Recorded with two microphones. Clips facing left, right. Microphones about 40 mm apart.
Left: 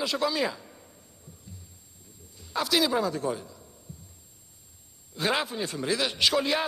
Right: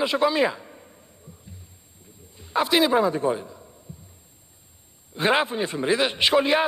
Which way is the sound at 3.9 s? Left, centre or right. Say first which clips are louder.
Right 3 dB; right.